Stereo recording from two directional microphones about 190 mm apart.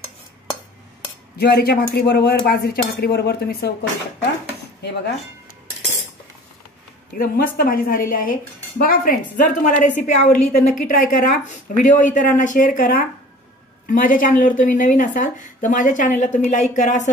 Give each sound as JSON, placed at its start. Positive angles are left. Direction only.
{"t": 1.4, "sound": "speech", "side_deg": 55}
{"t": 4.8, "sound": "speech", "side_deg": 65}
{"t": 7.2, "sound": "a woman's voice", "side_deg": 50}